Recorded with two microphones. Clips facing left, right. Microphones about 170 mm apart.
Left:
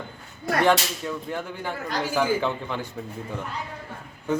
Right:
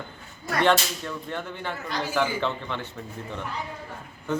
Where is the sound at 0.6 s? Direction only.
5° left (ahead or behind).